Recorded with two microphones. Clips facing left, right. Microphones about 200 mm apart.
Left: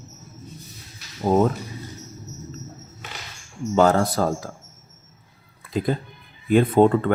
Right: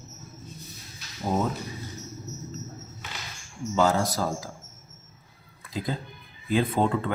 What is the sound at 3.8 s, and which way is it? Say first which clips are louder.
Speech: left 6 dB; 60° left (ahead or behind).